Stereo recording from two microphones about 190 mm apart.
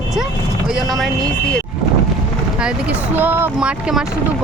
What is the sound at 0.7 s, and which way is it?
Speech, centre (ahead or behind).